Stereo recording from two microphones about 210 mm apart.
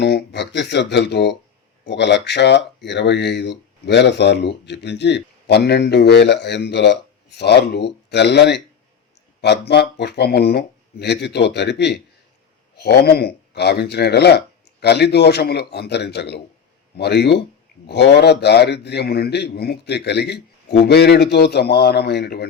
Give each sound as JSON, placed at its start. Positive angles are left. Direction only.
{"t": 0.0, "sound": "speech", "side_deg": 55}